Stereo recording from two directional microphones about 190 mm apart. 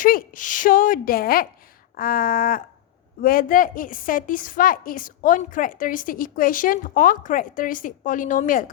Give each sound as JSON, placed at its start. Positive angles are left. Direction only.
{"t": 0.0, "sound": "a woman's voice", "side_deg": 45}